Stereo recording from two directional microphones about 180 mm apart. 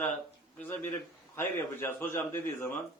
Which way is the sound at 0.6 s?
10° left (ahead or behind).